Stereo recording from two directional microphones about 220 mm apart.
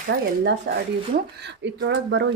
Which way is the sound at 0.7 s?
50° right (ahead or behind).